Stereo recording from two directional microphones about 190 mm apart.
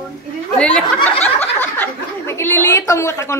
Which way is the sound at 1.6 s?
10° left (ahead or behind).